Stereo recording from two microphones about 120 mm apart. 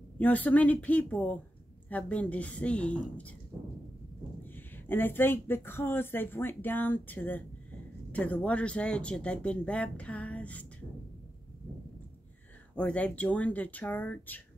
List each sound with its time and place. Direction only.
0.2 s speech: 15° left (ahead or behind)
4.5 s speech: 15° left (ahead or behind)
12.7 s speech: 10° left (ahead or behind)